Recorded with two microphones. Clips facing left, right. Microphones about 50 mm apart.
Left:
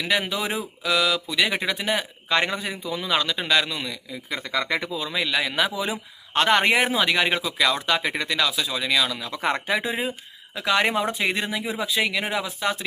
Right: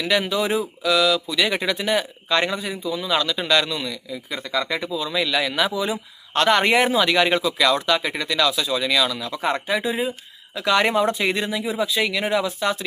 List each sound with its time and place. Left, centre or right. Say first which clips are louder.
0.0 s speech: right 3 dB; centre
0.8 s speech: right 2 dB; left
1.5 s speech: right 3 dB; centre
2.6 s speech: right 3 dB; left
4.5 s speech: right 2 dB; left
5.0 s speech: right 4 dB; centre
8.4 s speech: right 4 dB; centre
9.3 s speech: right 1 dB; left
10.7 s speech: right 3 dB; centre
11.3 s speech: right 3 dB; left
12.2 s speech: right 4 dB; centre